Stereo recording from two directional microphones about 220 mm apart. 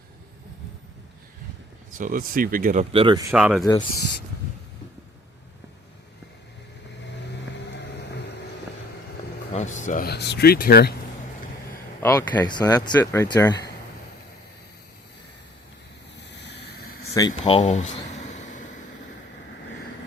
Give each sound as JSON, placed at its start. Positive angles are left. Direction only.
{"t": 1.9, "sound": "speech", "side_deg": -35}
{"t": 2.9, "sound": "speech", "side_deg": -25}
{"t": 3.3, "sound": "speech", "side_deg": -5}
{"t": 3.6, "sound": "speech", "side_deg": 15}
{"t": 9.6, "sound": "speech", "side_deg": 35}
{"t": 12.0, "sound": "speech", "side_deg": 10}
{"t": 16.5, "sound": "a sound", "side_deg": 50}
{"t": 17.0, "sound": "a sound", "side_deg": 15}